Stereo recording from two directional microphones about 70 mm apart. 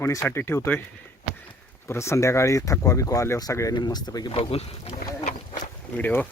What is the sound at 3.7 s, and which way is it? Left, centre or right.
Speech, left.